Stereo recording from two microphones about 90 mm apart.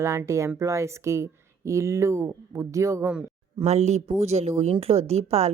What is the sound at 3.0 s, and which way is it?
Speech, 10° right (ahead or behind).